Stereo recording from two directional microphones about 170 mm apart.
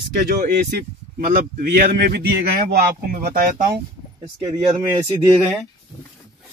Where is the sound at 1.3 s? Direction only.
55° right (ahead or behind).